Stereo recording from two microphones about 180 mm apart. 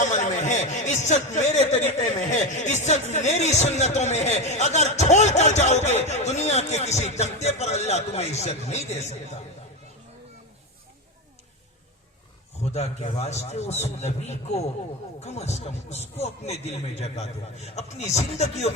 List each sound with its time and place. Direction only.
0.0 s a sound: 40° left (ahead or behind)
2.0 s speech: 40° left (ahead or behind)
12.6 s speech: 35° left (ahead or behind)